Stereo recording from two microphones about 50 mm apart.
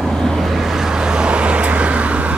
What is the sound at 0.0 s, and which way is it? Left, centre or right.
Vehicle, centre.